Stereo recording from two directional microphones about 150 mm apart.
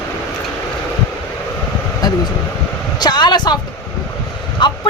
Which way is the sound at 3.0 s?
30° left (ahead or behind).